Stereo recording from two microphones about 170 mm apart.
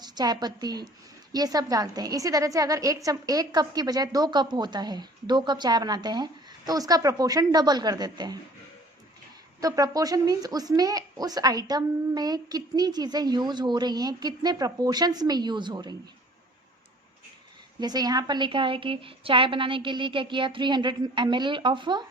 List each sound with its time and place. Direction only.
0.0 s a woman's voice: 25° right (ahead or behind)
9.6 s a woman's voice: 20° right (ahead or behind)
17.7 s a woman's voice: 25° right (ahead or behind)